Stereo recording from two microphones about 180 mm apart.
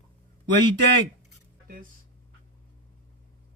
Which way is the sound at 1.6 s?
50° right (ahead or behind).